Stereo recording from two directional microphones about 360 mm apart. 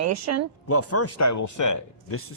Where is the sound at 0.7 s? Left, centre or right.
Left.